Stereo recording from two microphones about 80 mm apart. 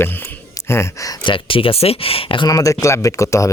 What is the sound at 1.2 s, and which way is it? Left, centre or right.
Speech, left.